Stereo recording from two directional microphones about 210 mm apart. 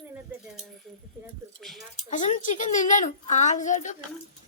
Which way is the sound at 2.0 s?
35° left (ahead or behind).